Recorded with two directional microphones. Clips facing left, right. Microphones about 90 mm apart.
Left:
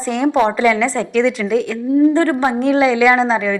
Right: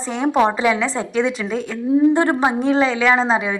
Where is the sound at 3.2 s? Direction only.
10° right (ahead or behind).